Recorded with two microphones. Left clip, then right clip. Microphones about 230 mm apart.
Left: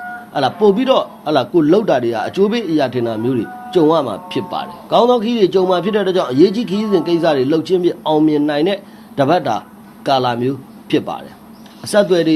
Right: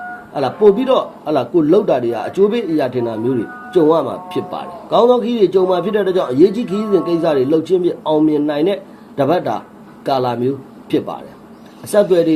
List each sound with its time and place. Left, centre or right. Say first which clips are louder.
0.3 s a man's voice: right 1 dB; left